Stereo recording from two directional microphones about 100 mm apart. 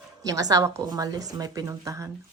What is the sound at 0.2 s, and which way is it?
A woman's voice, 35° right (ahead or behind).